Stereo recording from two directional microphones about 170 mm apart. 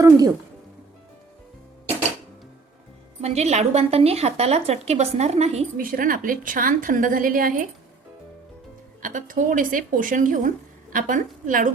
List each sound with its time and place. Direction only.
0.0 s speech: 20° right (ahead or behind)
3.2 s a woman's voice: 40° right (ahead or behind)
5.7 s a woman's voice: 55° right (ahead or behind)
9.0 s speech: 50° right (ahead or behind)